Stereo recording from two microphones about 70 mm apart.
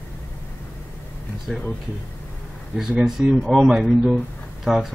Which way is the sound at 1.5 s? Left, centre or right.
Centre.